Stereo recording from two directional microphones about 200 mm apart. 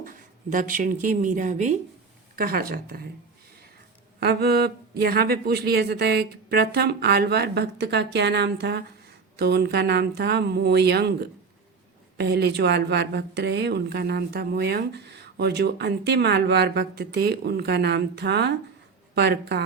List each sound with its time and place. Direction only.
0.5 s speech: 40° right (ahead or behind)
4.2 s speech: 50° right (ahead or behind)